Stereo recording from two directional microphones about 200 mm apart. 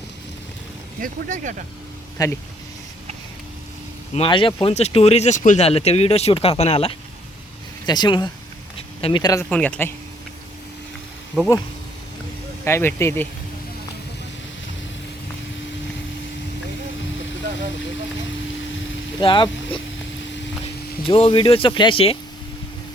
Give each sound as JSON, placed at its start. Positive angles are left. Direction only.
{"t": 0.9, "sound": "speech", "side_deg": -40}
{"t": 2.2, "sound": "speech", "side_deg": 20}
{"t": 4.1, "sound": "speech", "side_deg": 25}
{"t": 9.5, "sound": "speech", "side_deg": 5}
{"t": 12.6, "sound": "speech", "side_deg": 15}
{"t": 19.2, "sound": "speech", "side_deg": 25}
{"t": 21.0, "sound": "speech", "side_deg": 25}